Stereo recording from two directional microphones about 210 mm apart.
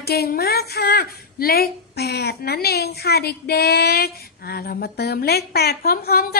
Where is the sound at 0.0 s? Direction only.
50° left (ahead or behind).